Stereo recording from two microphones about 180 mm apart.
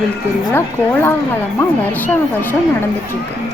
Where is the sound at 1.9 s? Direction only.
10° left (ahead or behind).